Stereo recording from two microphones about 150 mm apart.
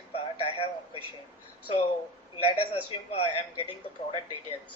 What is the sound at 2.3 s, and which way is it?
Speech, 40° left (ahead or behind).